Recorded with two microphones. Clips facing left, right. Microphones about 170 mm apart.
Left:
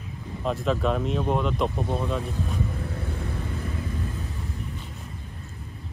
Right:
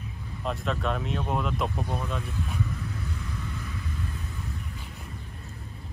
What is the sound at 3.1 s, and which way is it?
Vehicle, 55° left (ahead or behind).